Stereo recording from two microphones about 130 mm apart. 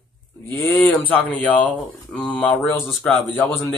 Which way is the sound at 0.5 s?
15° left (ahead or behind).